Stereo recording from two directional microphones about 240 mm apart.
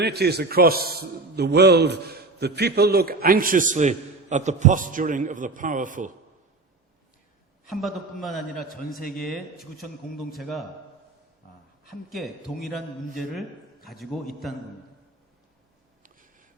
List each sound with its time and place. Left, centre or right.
0.0 s a man's voice: right
7.7 s a man's voice: centre
9.0 s speech: left
9.2 s a man's voice: centre
12.1 s a man's voice: centre
16.0 s a sound: right